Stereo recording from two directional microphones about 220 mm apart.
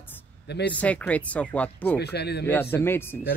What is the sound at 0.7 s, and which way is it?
Speech, 5° left (ahead or behind).